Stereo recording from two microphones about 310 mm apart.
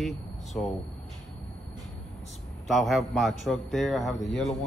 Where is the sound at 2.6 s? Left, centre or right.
Centre.